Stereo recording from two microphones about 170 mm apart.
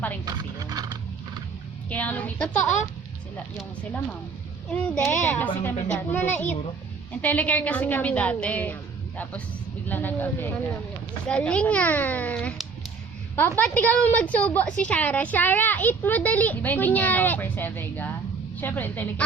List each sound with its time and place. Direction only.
0.3 s a sound: 20° right (ahead or behind)
1.9 s a woman's voice: 10° left (ahead or behind)
4.7 s a woman's voice: 5° left (ahead or behind)